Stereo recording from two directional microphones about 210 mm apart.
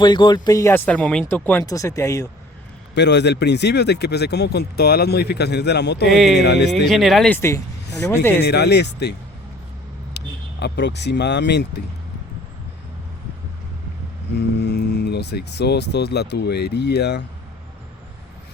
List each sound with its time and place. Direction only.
0.0 s speech: 20° left (ahead or behind)
2.9 s speech: 55° left (ahead or behind)
6.1 s speech: centre (ahead or behind)
6.3 s speech: 50° left (ahead or behind)
6.8 s speech: centre (ahead or behind)
8.4 s speech: 50° left (ahead or behind)
10.2 s speech: 55° left (ahead or behind)
14.3 s speech: 50° left (ahead or behind)